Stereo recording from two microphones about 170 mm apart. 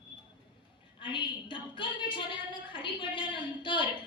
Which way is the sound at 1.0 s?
30° left (ahead or behind).